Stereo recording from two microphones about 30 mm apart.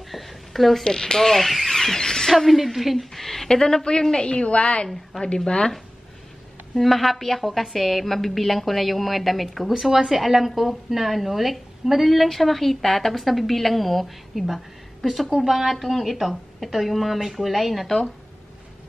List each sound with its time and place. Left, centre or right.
0.1 s a sound: centre
0.8 s speech: left
1.1 s speech: centre
2.3 s a woman's voice: centre
3.2 s speech: centre
3.4 s speech: centre
4.2 s speech: left
4.5 s a woman's voice: left
6.7 s a woman's voice: centre
12.3 s a woman's voice: centre
15.7 s a woman's voice: centre